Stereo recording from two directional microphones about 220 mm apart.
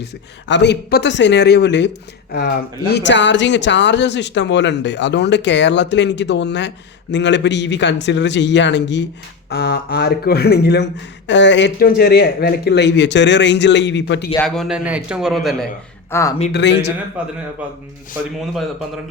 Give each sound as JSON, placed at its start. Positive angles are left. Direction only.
{"t": 0.0, "sound": "speech", "side_deg": 50}
{"t": 2.9, "sound": "speech", "side_deg": 55}
{"t": 14.3, "sound": "a man's voice", "side_deg": 0}
{"t": 16.1, "sound": "speech", "side_deg": 10}
{"t": 16.5, "sound": "speech", "side_deg": 50}
{"t": 17.2, "sound": "a man's voice", "side_deg": -5}